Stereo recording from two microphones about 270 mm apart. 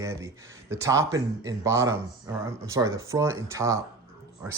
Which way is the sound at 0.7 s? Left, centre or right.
Centre.